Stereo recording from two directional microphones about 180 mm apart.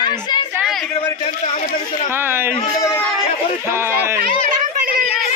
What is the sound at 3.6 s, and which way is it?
Speech, 15° right (ahead or behind).